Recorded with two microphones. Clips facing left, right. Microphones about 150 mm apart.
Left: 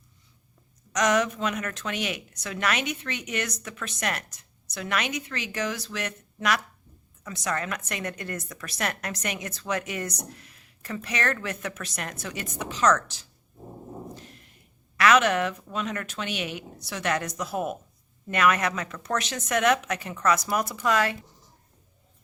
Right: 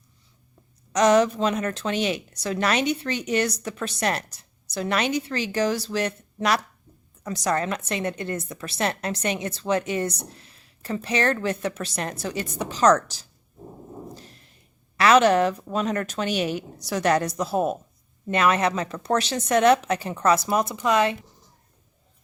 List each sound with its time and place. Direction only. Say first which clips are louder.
0.9 s a woman's voice: right 6 dB; 30° right (ahead or behind)
14.2 s a sound: even; 35° right (ahead or behind)
14.9 s a woman's voice: right 4 dB; 30° right (ahead or behind)